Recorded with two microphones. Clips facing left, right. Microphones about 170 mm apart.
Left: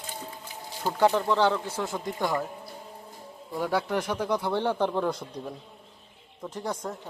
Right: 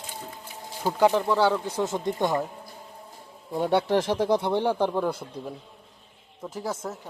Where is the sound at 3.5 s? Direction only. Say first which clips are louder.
Right 5 dB; 25° right (ahead or behind).